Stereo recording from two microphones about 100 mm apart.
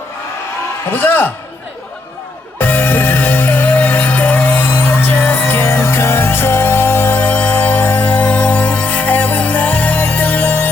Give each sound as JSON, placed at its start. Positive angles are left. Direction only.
{"t": 0.9, "sound": "a man's voice", "side_deg": 20}
{"t": 2.6, "sound": "music", "side_deg": 20}